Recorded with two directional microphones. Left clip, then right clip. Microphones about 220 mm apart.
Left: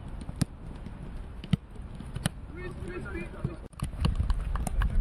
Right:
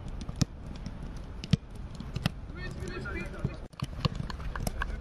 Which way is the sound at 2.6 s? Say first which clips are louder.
Left 1 dB; 40° right (ahead or behind).